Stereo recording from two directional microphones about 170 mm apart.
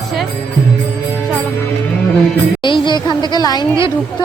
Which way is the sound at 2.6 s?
30° left (ahead or behind).